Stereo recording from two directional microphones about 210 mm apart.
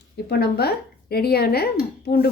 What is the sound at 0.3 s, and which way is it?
A woman's voice, 50° left (ahead or behind).